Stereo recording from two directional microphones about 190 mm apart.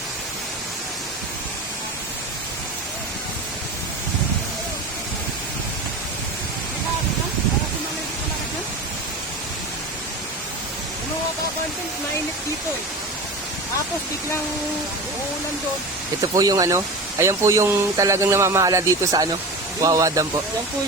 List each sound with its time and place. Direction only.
16.2 s speech: 20° right (ahead or behind)